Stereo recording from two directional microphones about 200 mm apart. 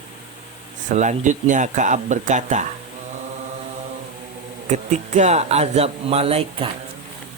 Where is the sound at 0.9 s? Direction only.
35° right (ahead or behind).